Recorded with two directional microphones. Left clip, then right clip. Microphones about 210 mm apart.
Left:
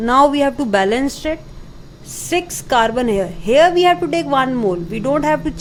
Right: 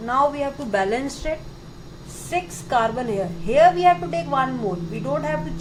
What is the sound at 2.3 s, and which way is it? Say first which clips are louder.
A woman's voice: left 6 dB; 50° left (ahead or behind).